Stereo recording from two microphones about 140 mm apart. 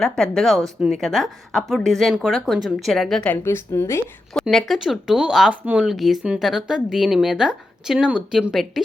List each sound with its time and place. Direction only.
0.0 s speech: centre (ahead or behind)
3.4 s a woman's voice: 20° left (ahead or behind)
4.4 s speech: centre (ahead or behind)